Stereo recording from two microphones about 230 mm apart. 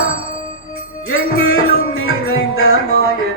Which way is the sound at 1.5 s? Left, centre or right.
Left.